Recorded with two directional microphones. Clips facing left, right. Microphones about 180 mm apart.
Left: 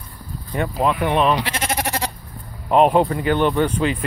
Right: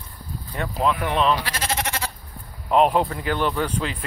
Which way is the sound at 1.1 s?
15° left (ahead or behind).